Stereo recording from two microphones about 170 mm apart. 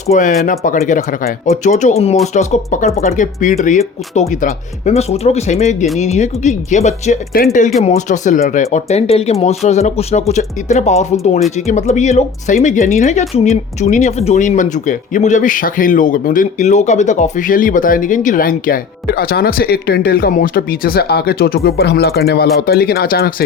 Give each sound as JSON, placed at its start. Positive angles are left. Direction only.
{"t": 0.1, "sound": "speech", "side_deg": 50}